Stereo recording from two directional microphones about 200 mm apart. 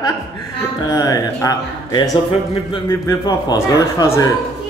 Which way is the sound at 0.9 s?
15° left (ahead or behind).